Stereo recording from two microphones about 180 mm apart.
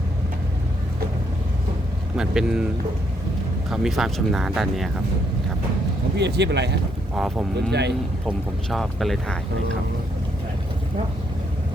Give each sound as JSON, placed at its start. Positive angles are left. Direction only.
{"t": 2.1, "sound": "speech", "side_deg": -5}
{"t": 3.7, "sound": "speech", "side_deg": 0}
{"t": 6.1, "sound": "speech", "side_deg": -70}
{"t": 7.2, "sound": "speech", "side_deg": 0}
{"t": 7.7, "sound": "speech", "side_deg": -70}
{"t": 8.3, "sound": "speech", "side_deg": 0}